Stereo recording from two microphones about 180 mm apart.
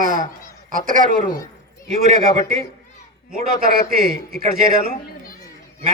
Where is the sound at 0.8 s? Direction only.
50° right (ahead or behind).